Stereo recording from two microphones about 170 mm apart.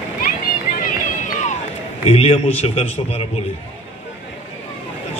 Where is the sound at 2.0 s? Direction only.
35° left (ahead or behind).